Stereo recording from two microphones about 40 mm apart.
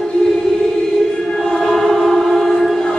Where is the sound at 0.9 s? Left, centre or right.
Centre.